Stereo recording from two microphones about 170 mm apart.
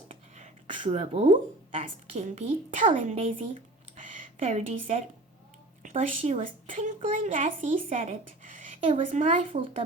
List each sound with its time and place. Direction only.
0.1 s a sound: 35° right (ahead or behind)
0.8 s a woman's voice: 35° right (ahead or behind)
2.8 s a woman's voice: 30° right (ahead or behind)
4.1 s a woman's voice: 45° right (ahead or behind)
6.4 s a woman's voice: 50° right (ahead or behind)
9.5 s a woman's voice: 30° right (ahead or behind)